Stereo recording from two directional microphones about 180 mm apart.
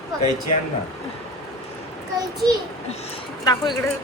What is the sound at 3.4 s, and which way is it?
Speech, 20° left (ahead or behind).